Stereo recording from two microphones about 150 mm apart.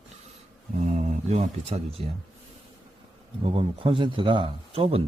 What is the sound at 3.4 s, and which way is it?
A man's voice, 40° right (ahead or behind).